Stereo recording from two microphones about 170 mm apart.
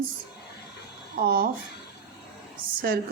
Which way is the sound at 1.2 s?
60° right (ahead or behind).